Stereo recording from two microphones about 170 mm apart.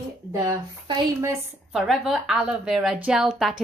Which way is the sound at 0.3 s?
20° right (ahead or behind).